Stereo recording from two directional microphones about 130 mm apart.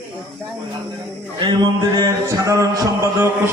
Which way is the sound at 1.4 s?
35° right (ahead or behind).